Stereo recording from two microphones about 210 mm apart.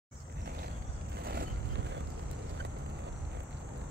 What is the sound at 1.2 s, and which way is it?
Vehicle, 50° right (ahead or behind).